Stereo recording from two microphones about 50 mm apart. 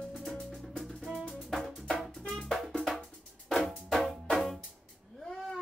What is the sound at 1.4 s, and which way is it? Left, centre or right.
Music, centre.